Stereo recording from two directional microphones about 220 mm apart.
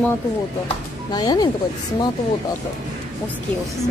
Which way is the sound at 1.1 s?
20° left (ahead or behind).